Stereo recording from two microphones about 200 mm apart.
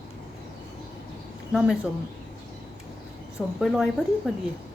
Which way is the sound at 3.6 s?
Centre (ahead or behind).